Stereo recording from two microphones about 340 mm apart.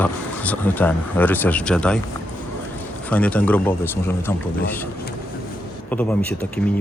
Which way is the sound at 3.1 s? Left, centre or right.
Centre.